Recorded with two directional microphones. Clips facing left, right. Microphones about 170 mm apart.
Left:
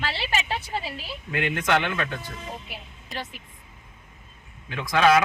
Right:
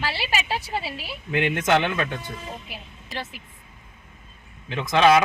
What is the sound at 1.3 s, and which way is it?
Speech, 25° right (ahead or behind).